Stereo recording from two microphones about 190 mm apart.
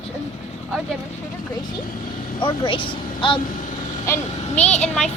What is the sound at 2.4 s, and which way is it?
Speech, 25° left (ahead or behind).